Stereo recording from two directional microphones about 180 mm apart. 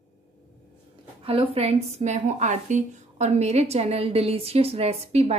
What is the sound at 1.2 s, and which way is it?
A woman's voice, 30° right (ahead or behind).